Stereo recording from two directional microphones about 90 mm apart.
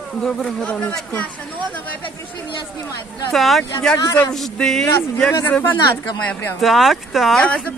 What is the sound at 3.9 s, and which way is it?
Speech, 50° left (ahead or behind).